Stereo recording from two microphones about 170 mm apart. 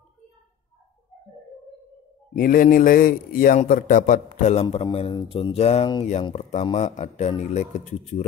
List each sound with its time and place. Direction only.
2.3 s a man's voice: 55° left (ahead or behind); by 4.8 s 40° left (ahead or behind)
4.8 s a man's voice: 30° left (ahead or behind)
6.3 s a man's voice: 40° left (ahead or behind)